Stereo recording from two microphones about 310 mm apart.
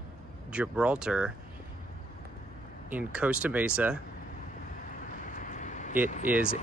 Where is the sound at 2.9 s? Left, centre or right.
Centre.